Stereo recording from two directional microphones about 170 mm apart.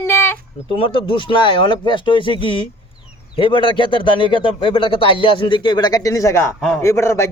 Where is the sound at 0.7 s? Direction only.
30° left (ahead or behind).